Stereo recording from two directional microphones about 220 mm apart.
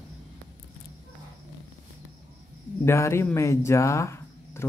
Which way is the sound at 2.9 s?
10° left (ahead or behind).